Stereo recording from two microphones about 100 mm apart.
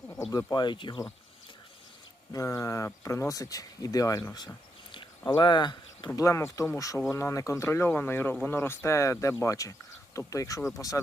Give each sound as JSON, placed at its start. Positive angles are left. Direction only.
{"t": 0.5, "sound": "speech", "side_deg": 50}
{"t": 2.3, "sound": "speech", "side_deg": 35}
{"t": 4.4, "sound": "a sound", "side_deg": 50}
{"t": 6.1, "sound": "speech", "side_deg": 30}